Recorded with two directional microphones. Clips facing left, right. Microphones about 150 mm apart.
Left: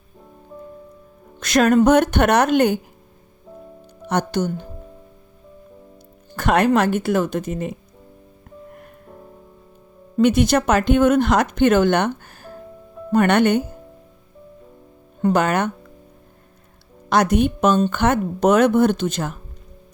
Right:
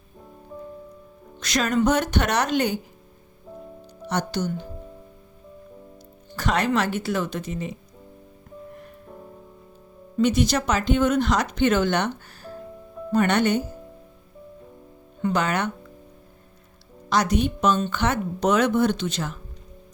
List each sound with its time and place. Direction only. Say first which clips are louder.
1.4 s speech: left 7 dB; 55° left (ahead or behind)
4.0 s speech: left 5 dB; 55° left (ahead or behind)
6.3 s speech: left 6 dB; 55° left (ahead or behind)
10.2 s speech: left 5 dB; 55° left (ahead or behind)
15.2 s speech: left 5 dB; 50° left (ahead or behind)
17.1 s speech: left 5 dB; 55° left (ahead or behind)